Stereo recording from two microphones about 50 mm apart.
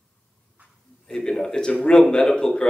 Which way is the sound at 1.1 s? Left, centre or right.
Centre.